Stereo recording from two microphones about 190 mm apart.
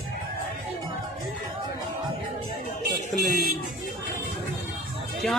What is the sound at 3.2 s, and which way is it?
Music, 50° right (ahead or behind).